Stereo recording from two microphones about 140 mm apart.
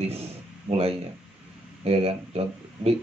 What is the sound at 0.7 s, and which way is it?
Speech, 45° right (ahead or behind).